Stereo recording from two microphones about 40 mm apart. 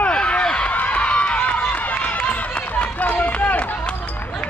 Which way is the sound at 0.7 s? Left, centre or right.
Left.